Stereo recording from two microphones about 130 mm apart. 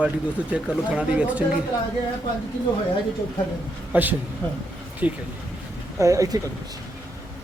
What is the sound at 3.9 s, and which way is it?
Speech, 15° right (ahead or behind).